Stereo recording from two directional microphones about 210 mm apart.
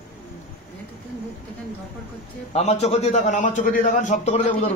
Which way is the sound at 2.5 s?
30° left (ahead or behind).